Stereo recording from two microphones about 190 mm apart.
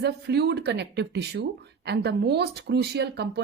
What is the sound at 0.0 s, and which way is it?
A woman's voice, 60° right (ahead or behind).